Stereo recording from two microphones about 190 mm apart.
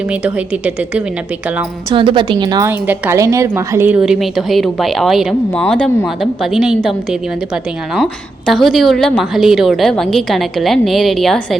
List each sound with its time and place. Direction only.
0.1 s a woman's voice: 5° right (ahead or behind)
1.9 s a woman's voice: 25° right (ahead or behind); by 11.4 s centre (ahead or behind)